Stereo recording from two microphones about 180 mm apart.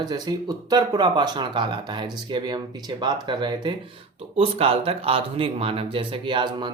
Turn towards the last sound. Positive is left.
turn(degrees=-25)  # may be behind; listen again after turning